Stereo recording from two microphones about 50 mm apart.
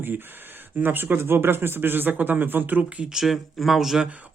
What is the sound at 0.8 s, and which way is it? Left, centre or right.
Speech, right.